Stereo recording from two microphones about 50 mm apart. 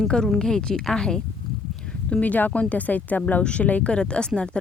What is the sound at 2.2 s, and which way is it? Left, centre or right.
A woman's voice, left.